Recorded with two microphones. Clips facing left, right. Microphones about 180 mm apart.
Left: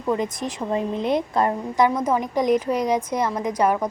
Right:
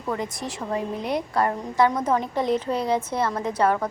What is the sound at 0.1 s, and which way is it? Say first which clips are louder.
A woman's voice: left 5 dB; 20° left (ahead or behind).